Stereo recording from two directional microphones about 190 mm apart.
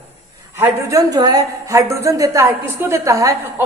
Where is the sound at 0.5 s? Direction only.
15° right (ahead or behind).